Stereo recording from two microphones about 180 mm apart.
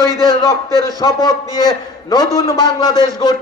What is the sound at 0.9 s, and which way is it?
A man's voice, 20° left (ahead or behind).